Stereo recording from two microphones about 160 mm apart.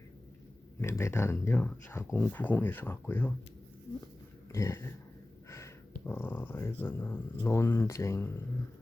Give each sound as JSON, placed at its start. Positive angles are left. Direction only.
{"t": 0.8, "sound": "speech", "side_deg": 15}
{"t": 4.5, "sound": "speech", "side_deg": 15}